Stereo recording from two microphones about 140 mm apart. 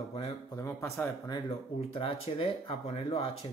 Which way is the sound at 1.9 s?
45° left (ahead or behind).